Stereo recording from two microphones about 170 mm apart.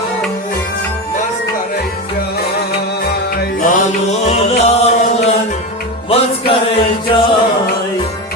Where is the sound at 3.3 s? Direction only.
55° left (ahead or behind).